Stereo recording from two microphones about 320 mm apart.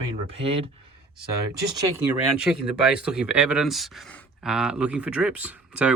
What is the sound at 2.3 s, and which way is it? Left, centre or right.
Speech, centre.